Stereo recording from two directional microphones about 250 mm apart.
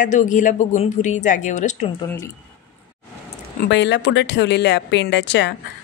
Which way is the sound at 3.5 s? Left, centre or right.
Left.